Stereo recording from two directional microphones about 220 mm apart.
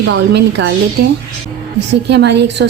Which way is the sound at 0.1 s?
50° right (ahead or behind).